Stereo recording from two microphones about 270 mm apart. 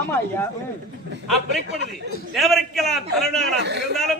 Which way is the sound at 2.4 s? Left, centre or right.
Centre.